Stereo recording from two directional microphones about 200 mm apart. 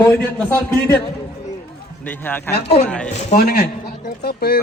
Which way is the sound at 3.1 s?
35° left (ahead or behind).